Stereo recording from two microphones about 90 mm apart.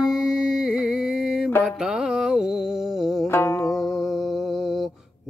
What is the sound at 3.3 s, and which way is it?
Music, 30° left (ahead or behind).